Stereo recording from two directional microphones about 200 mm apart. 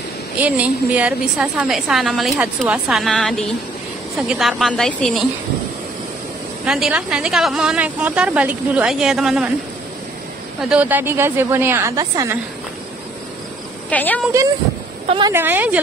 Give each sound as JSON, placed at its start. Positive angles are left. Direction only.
{"t": 0.4, "sound": "a woman's voice", "side_deg": -5}
{"t": 6.6, "sound": "a woman's voice", "side_deg": -5}
{"t": 10.7, "sound": "a woman's voice", "side_deg": -10}
{"t": 13.8, "sound": "a woman's voice", "side_deg": 5}
{"t": 15.0, "sound": "speech", "side_deg": -25}
{"t": 15.3, "sound": "a woman's voice", "side_deg": -10}